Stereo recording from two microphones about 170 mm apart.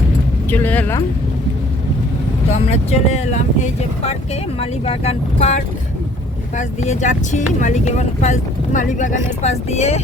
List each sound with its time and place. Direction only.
0.5 s speech: 10° left (ahead or behind)
2.5 s speech: 40° left (ahead or behind)
6.6 s speech: 45° left (ahead or behind)